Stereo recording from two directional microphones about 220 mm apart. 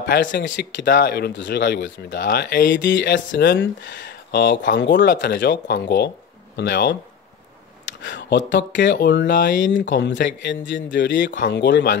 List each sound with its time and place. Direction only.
0.1 s speech: 50° left (ahead or behind)
2.1 s speech: 40° left (ahead or behind)